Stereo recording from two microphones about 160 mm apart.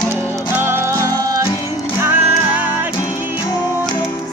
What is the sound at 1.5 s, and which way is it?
Music, 25° left (ahead or behind).